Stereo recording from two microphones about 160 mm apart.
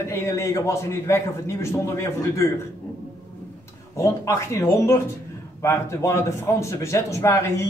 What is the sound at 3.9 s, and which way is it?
A man's voice, 20° left (ahead or behind).